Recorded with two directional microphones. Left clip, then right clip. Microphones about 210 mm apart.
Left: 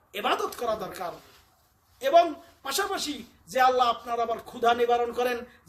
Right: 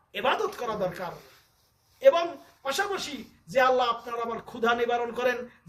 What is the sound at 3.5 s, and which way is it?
A man's voice, 15° left (ahead or behind).